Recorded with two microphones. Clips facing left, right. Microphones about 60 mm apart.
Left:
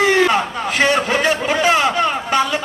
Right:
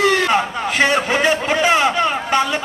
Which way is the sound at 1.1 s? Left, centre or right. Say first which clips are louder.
Even; centre.